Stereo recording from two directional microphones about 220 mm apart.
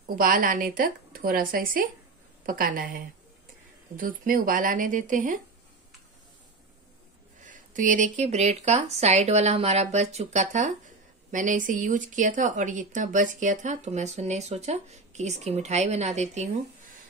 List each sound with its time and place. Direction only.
0.1 s speech: 40° right (ahead or behind)
7.4 s speech: 35° right (ahead or behind)